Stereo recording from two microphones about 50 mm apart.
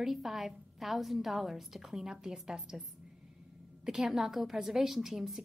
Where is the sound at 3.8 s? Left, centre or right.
Centre.